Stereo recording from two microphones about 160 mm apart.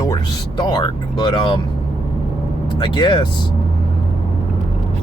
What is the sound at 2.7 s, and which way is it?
Speech, 30° left (ahead or behind).